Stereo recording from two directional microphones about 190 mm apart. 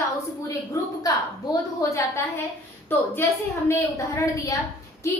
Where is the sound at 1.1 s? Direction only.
20° left (ahead or behind).